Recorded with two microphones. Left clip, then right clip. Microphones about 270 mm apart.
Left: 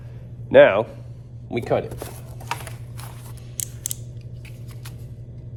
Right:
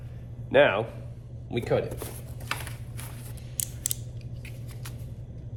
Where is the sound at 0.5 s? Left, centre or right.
Left.